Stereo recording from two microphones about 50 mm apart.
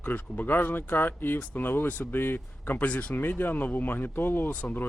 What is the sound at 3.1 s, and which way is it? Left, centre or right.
Speech, left.